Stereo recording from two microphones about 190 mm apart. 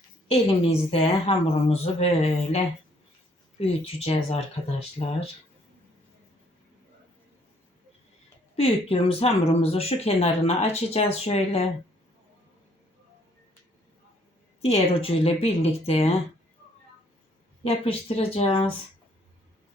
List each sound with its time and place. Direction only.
0.3 s speech: 30° left (ahead or behind)
3.6 s speech: 35° left (ahead or behind)
8.5 s speech: 30° left (ahead or behind)
14.6 s speech: 30° left (ahead or behind)
17.6 s speech: 30° left (ahead or behind)